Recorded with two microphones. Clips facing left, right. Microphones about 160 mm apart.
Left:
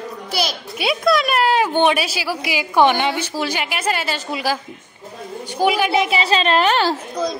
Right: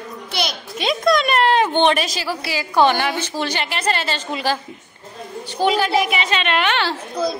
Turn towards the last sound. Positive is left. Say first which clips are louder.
# right 1 dB
turn(degrees=-10)  # may be behind; listen again after turning